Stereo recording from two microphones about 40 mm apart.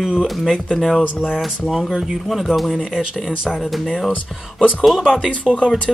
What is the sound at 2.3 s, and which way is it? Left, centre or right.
Speech, centre.